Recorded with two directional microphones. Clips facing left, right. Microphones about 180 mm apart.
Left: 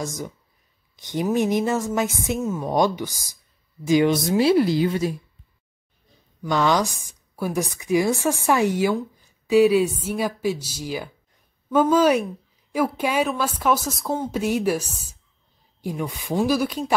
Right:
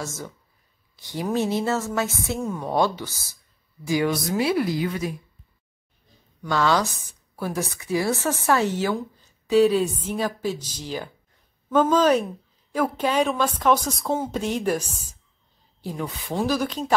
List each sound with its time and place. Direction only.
0.0 s a woman's voice: 15° left (ahead or behind)
6.4 s a woman's voice: 15° left (ahead or behind)
14.8 s a woman's voice: 10° right (ahead or behind)
15.8 s a woman's voice: 15° left (ahead or behind)